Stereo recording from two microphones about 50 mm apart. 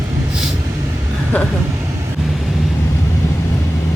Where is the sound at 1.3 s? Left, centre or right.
Left.